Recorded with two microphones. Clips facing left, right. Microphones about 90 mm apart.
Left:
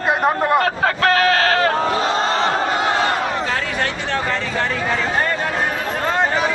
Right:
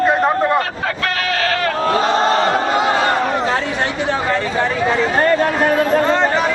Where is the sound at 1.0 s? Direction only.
40° left (ahead or behind).